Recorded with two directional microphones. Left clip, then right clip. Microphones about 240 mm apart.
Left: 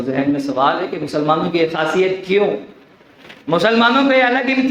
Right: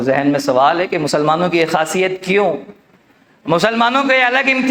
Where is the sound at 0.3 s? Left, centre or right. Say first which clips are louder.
Right 3 dB; right.